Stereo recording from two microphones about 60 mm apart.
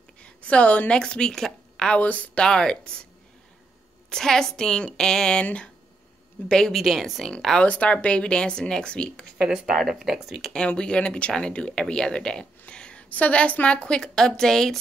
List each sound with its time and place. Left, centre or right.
0.2 s a woman's voice: left
2.0 s speech: left
2.4 s speech: centre
4.1 s speech: centre
6.5 s speech: centre
7.6 s speech: left
9.4 s speech: centre
10.5 s speech: centre